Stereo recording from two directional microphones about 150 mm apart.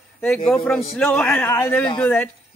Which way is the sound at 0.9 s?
5° left (ahead or behind).